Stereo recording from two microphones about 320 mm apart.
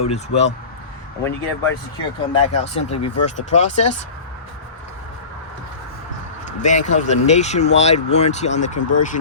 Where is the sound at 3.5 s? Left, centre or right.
Left.